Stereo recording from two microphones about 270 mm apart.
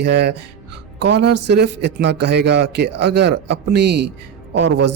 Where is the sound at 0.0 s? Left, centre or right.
Right.